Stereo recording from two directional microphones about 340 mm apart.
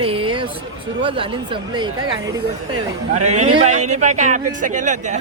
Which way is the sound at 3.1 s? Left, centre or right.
Centre.